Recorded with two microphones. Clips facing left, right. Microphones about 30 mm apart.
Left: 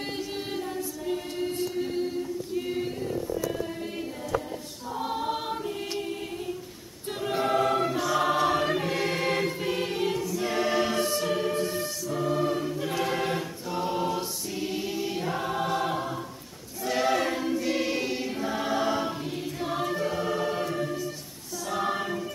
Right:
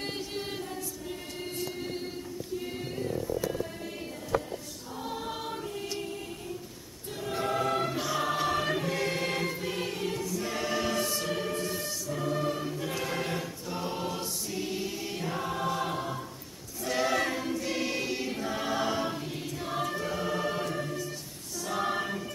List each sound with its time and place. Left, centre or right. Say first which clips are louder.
0.0 s choir: left 2 dB; centre
0.7 s choir: left 7 dB; centre
1.4 s music: left 5 dB; centre
4.9 s choir: left 7 dB; left
7.2 s choir: left 5 dB; left
7.8 s choir: left 5 dB; centre
9.6 s music: left 5 dB; centre
10.3 s choir: left 5 dB; left; by 22.2 s centre